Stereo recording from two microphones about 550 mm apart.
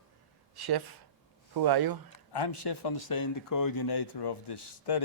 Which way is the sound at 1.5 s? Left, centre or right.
Right.